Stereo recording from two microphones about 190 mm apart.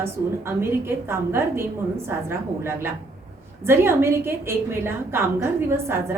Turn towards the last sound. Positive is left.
turn(degrees=-10)  # may be behind; listen again after turning